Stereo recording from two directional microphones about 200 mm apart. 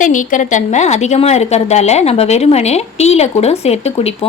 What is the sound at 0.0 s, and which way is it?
A woman's voice, 40° left (ahead or behind).